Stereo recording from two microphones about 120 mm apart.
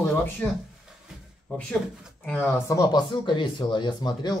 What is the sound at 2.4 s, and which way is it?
Speech, 30° left (ahead or behind).